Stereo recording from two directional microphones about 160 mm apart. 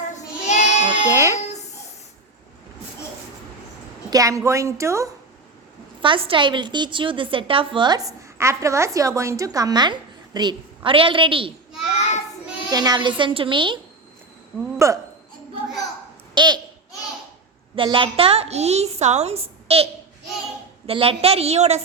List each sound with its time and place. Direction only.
0.1 s child singing: 45° left (ahead or behind)
0.9 s music: 15° right (ahead or behind)
4.1 s a woman's voice: 20° right (ahead or behind)
6.0 s a woman's voice: 35° right (ahead or behind)
11.9 s child singing: 45° left (ahead or behind)
12.7 s a woman's voice: 25° right (ahead or behind)
14.8 s a woman's voice: 20° right (ahead or behind)
16.3 s a child's voice: 25° right (ahead or behind)
17.7 s a woman's voice: 35° right (ahead or behind)